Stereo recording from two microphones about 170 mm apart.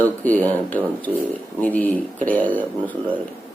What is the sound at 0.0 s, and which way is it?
Speech, 10° left (ahead or behind).